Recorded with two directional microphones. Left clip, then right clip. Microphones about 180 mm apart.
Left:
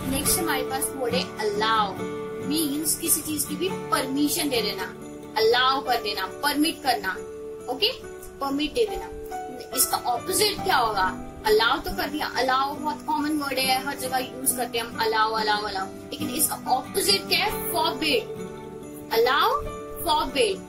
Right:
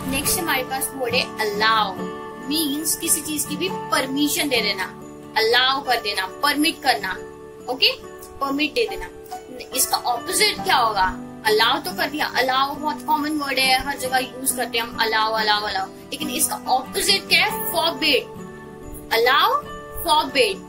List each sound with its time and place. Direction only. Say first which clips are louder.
0.4 s speech: right 3 dB; 10° left (ahead or behind)
3.3 s speech: right 3 dB; 15° left (ahead or behind)